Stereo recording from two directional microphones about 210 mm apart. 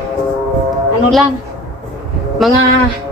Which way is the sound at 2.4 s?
Centre (ahead or behind).